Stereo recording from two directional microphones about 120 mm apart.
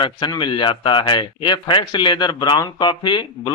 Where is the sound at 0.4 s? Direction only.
40° left (ahead or behind).